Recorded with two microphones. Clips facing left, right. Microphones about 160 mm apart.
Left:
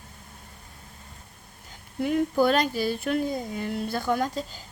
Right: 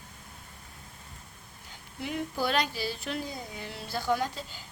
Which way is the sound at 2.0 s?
50° left (ahead or behind).